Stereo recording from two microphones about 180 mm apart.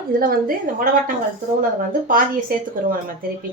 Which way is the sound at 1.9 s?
50° right (ahead or behind).